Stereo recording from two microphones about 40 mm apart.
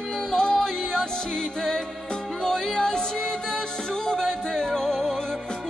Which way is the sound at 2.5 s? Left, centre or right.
Centre.